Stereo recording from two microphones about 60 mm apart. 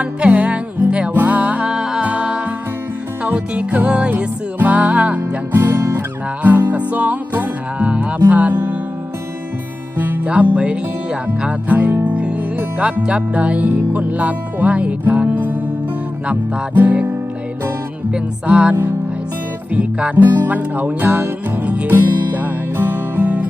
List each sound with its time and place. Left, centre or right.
0.0 s music: right
10.4 s music: right
16.7 s music: right
18.1 s music: centre
19.7 s music: right
20.1 s music: right